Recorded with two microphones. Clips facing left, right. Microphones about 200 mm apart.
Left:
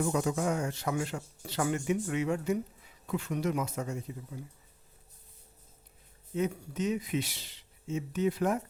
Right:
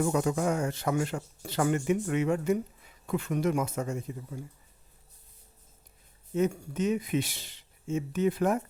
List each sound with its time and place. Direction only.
0.0 s speech: 55° right (ahead or behind)
6.3 s speech: 50° right (ahead or behind)